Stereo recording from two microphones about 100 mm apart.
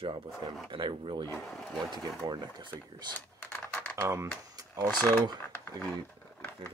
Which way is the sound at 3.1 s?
15° left (ahead or behind).